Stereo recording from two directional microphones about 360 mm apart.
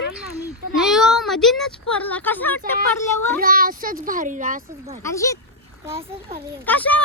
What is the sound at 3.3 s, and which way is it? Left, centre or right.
A child's voice, right.